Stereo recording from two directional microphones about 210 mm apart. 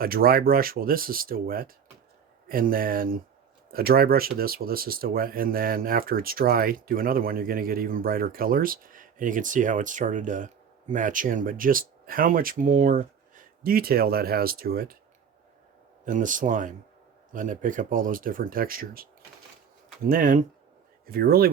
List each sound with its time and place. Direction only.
0.0 s speech: 45° right (ahead or behind)
16.0 s speech: 40° right (ahead or behind)
20.1 s speech: 40° right (ahead or behind)